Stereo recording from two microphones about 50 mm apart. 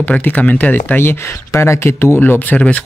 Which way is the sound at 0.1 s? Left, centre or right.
Left.